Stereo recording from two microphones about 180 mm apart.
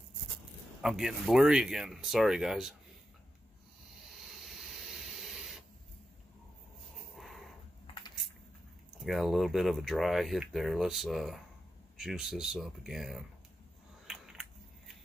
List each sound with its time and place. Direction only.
0.7 s speech: centre (ahead or behind)
4.1 s printer: centre (ahead or behind)
7.2 s a sound: centre (ahead or behind)
7.8 s a sound: 30° left (ahead or behind)
9.0 s speech: centre (ahead or behind)
14.0 s biting: 5° right (ahead or behind)